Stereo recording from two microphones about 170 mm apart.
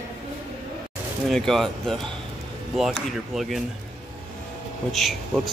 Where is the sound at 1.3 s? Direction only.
Centre (ahead or behind).